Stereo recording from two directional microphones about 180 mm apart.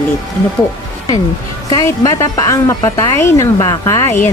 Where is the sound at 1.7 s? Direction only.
20° left (ahead or behind).